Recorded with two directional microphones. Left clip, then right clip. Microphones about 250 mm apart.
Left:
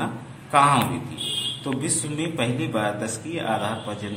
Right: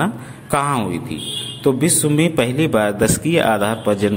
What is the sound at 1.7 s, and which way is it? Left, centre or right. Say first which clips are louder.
Speech: right 11 dB; right.